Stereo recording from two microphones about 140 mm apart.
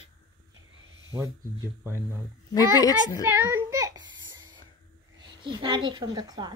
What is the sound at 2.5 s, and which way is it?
Speech, 25° left (ahead or behind).